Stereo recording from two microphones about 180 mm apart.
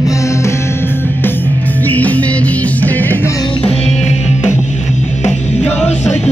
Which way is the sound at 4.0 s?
40° left (ahead or behind).